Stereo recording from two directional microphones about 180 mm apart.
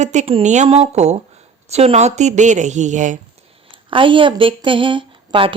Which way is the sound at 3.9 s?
30° right (ahead or behind).